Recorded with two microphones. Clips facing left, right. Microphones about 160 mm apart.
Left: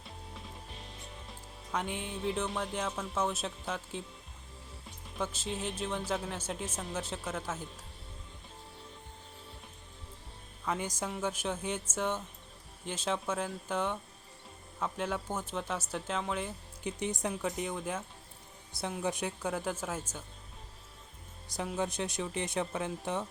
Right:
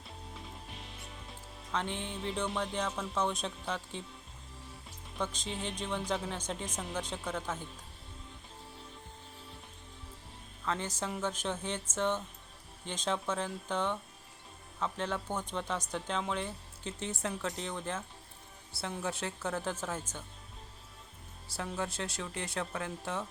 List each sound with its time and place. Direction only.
1.7 s speech: 5° left (ahead or behind)
5.1 s speech: 5° left (ahead or behind)
10.7 s speech: 10° left (ahead or behind)
17.0 s speech: 15° left (ahead or behind)
21.4 s speech: 15° left (ahead or behind)